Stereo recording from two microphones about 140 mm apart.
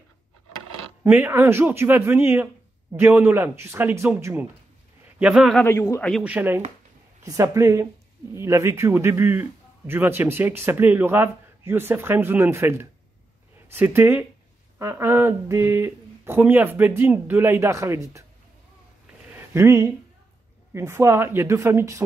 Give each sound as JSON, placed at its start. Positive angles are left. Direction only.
{"t": 1.0, "sound": "a man's voice", "side_deg": -15}
{"t": 5.6, "sound": "a man's voice", "side_deg": 15}
{"t": 6.2, "sound": "a man's voice", "side_deg": -15}
{"t": 19.3, "sound": "a sound", "side_deg": -20}
{"t": 20.7, "sound": "speech", "side_deg": -20}